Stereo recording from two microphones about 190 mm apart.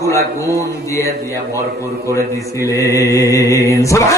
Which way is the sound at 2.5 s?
15° left (ahead or behind).